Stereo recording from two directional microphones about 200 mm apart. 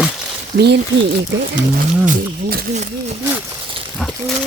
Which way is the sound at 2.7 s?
35° right (ahead or behind).